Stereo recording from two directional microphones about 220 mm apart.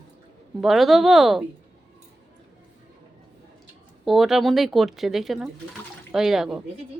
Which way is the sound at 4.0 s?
Centre (ahead or behind).